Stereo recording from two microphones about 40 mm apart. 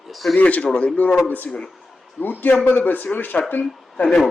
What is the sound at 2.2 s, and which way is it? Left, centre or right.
A man's voice, left.